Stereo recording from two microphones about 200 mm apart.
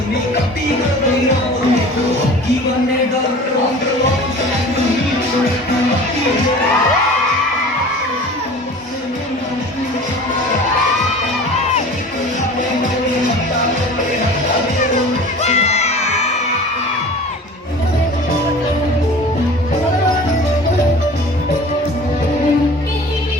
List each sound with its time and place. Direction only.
15.4 s music: 35° left (ahead or behind)